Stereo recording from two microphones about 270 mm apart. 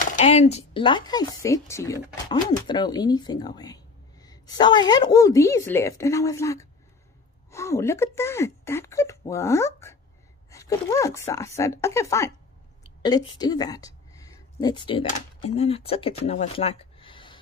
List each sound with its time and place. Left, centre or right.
0.0 s a woman's voice: left